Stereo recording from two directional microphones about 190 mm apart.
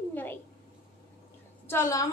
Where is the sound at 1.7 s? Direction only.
15° left (ahead or behind).